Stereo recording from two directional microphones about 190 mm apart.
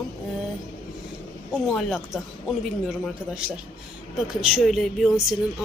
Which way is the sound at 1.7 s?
Centre (ahead or behind).